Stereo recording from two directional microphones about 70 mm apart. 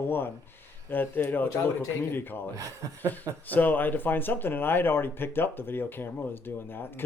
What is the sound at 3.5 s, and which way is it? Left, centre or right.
Speech, left.